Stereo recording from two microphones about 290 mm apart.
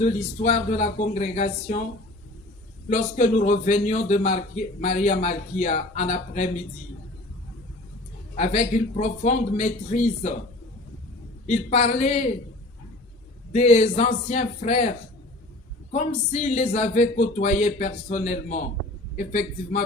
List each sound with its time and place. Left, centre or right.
0.0 s a man's voice: left
2.9 s a man's voice: left
8.4 s a man's voice: left
11.4 s a man's voice: left
13.5 s a man's voice: left